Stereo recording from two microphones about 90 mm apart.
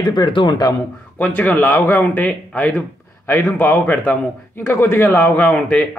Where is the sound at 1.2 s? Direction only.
20° left (ahead or behind).